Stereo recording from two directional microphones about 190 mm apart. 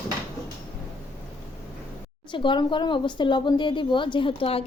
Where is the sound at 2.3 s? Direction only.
25° left (ahead or behind).